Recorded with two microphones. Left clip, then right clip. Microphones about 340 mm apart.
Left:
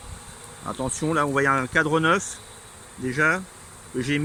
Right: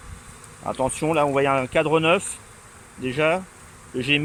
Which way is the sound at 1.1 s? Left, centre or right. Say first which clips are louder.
Even; centre.